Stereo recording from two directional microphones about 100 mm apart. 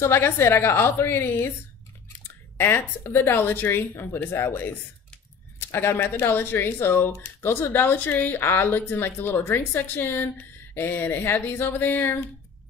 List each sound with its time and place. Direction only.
0.0 s speech: 25° left (ahead or behind)
2.5 s speech: 20° left (ahead or behind)